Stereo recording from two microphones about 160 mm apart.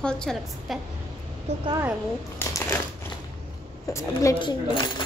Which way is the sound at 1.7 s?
15° right (ahead or behind).